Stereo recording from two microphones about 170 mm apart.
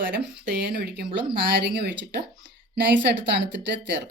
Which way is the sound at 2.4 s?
90° right.